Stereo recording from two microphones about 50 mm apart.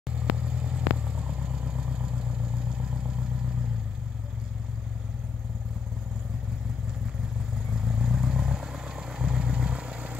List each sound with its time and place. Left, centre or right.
0.2 s vehicle: centre
7.7 s vehicle: centre